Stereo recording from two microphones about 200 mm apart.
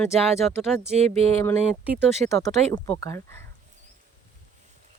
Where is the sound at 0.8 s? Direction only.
30° right (ahead or behind).